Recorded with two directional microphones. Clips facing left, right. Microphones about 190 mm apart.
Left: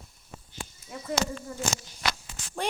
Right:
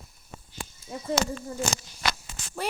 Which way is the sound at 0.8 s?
30° right (ahead or behind).